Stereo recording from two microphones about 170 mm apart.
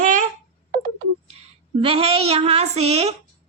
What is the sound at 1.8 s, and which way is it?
A woman's voice, 35° right (ahead or behind).